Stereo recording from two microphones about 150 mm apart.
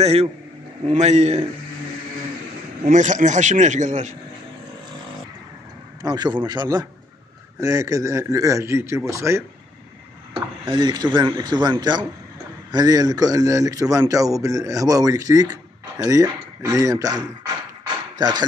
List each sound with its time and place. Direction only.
0.0 s a man's voice: 45° right (ahead or behind)
2.8 s speech: 55° right (ahead or behind)
6.0 s a man's voice: 30° right (ahead or behind)
10.3 s a man's voice: 30° right (ahead or behind)